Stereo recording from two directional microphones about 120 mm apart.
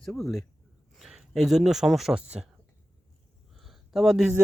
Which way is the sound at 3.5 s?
Centre (ahead or behind).